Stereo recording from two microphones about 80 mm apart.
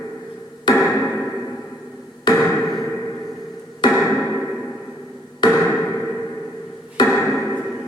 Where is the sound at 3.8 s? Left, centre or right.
Left.